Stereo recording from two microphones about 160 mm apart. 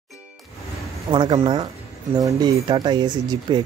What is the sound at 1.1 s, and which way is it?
Speech, 30° right (ahead or behind).